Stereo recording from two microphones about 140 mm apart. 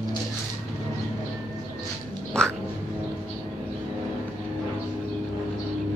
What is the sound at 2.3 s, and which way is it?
Music, 5° left (ahead or behind).